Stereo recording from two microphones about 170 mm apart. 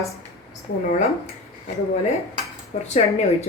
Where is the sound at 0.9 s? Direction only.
40° left (ahead or behind).